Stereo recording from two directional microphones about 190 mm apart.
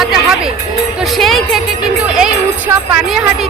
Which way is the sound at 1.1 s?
Centre (ahead or behind).